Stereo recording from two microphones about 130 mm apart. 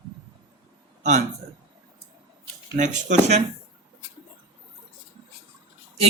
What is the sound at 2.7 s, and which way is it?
Speech, 70° right (ahead or behind).